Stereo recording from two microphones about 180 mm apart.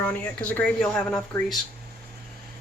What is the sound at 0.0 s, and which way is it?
Speech, 10° left (ahead or behind).